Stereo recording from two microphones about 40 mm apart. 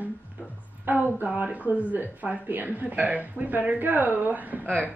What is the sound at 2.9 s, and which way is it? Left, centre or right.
A woman's voice, right.